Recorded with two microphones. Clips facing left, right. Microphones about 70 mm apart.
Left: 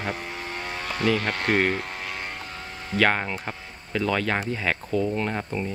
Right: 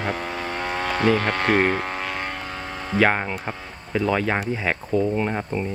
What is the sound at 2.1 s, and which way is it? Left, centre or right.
Vehicle, right.